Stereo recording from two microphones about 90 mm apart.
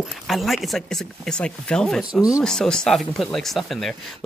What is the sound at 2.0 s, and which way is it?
Speech, 10° right (ahead or behind).